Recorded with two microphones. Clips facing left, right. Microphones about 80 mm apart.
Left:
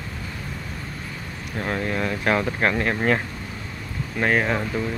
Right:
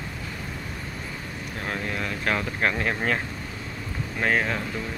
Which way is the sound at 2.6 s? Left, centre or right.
Centre.